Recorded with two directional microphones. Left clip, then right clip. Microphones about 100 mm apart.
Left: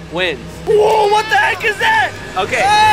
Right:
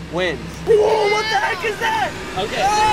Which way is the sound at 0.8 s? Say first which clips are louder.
Left 5 dB; 5° left (ahead or behind).